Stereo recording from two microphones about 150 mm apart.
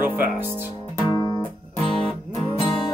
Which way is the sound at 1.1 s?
25° left (ahead or behind).